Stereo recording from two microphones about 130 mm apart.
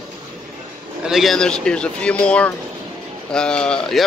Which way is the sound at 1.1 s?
Centre (ahead or behind).